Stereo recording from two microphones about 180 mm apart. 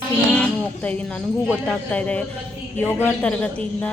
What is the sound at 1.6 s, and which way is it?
Speech, 5° left (ahead or behind).